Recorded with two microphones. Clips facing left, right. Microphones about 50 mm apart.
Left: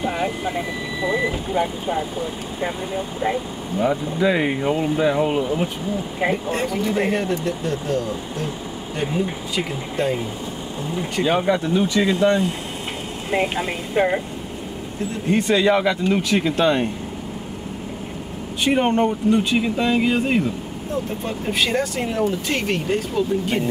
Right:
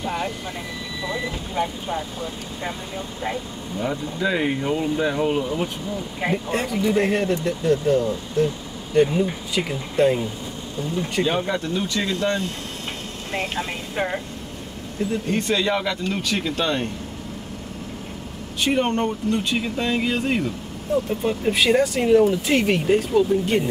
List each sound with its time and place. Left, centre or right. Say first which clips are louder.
0.0 s speech: left 4 dB; centre
6.3 s speech: left 1 dB; centre
11.2 s speech: left 4 dB; centre
15.2 s speech: left 7 dB; centre
18.6 s speech: left 3 dB; centre